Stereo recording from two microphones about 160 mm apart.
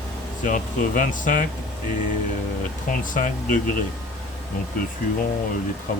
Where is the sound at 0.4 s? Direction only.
55° left (ahead or behind).